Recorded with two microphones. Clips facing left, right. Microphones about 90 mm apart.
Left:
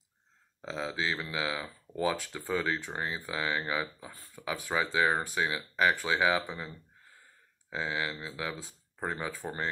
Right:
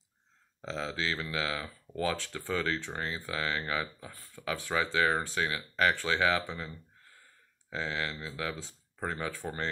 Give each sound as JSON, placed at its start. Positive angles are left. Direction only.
{"t": 0.6, "sound": "speech", "side_deg": 15}
{"t": 7.7, "sound": "speech", "side_deg": 10}